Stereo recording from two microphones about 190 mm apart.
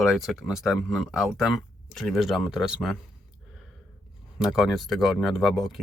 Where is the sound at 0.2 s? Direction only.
Centre (ahead or behind).